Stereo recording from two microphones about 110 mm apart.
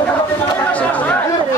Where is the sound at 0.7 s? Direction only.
15° left (ahead or behind).